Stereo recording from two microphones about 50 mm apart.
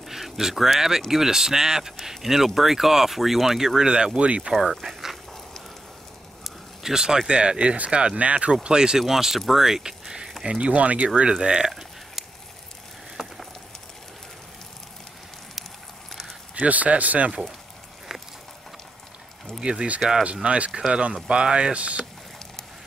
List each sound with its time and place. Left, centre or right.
0.1 s speech: centre; by 4.5 s right
4.5 s speech: centre
6.4 s speech: centre; by 11.1 s right
11.3 s speech: centre
13.2 s a sound: centre
16.5 s speech: right
19.6 s speech: centre